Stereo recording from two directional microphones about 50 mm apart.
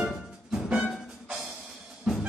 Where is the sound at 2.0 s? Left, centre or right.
Centre.